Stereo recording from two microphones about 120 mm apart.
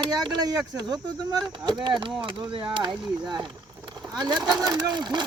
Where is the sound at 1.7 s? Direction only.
40° right (ahead or behind).